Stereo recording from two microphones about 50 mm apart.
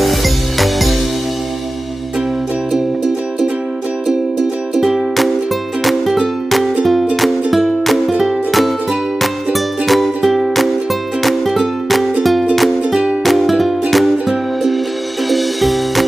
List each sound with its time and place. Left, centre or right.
0.0 s music: centre
2.7 s music: centre